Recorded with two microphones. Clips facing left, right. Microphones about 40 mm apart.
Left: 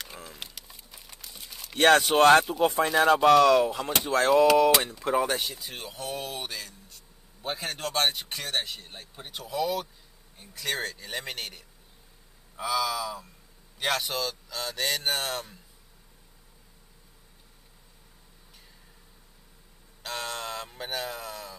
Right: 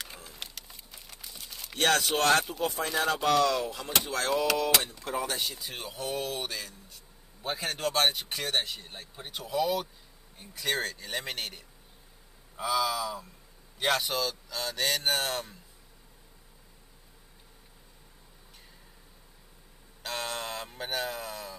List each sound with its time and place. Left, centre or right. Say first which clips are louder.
0.0 s a sound: left 2 dB; centre
1.8 s speech: left 7 dB; left
3.2 s speech: left 7 dB; centre
5.5 s speech: even; centre
20.0 s speech: even; centre